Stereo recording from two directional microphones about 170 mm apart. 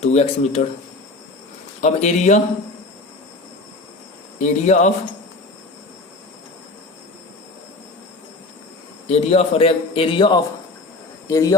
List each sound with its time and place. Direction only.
0.0 s a man's voice: 40° left (ahead or behind)
1.8 s speech: 40° left (ahead or behind)
4.4 s speech: 40° left (ahead or behind)
9.0 s a man's voice: 35° left (ahead or behind); by 11.5 s 20° left (ahead or behind)